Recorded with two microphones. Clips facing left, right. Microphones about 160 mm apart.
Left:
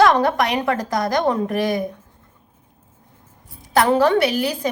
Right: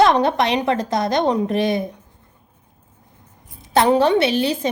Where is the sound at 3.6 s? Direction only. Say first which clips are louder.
Right 1 dB; 25° right (ahead or behind).